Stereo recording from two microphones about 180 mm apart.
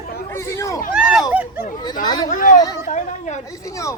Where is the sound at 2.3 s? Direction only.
50° left (ahead or behind).